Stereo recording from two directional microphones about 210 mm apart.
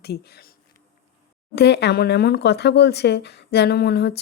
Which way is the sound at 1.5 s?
55° left (ahead or behind).